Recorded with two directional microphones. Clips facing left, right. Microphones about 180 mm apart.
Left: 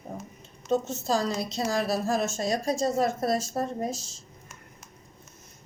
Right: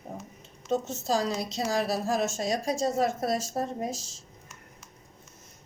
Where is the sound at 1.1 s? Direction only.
10° right (ahead or behind).